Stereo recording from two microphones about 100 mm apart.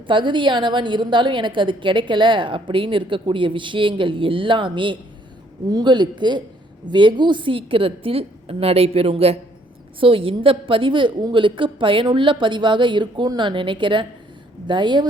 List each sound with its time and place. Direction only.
0.1 s a woman's voice: 55° right (ahead or behind); by 9.4 s 90° right
10.0 s a woman's voice: 65° right (ahead or behind)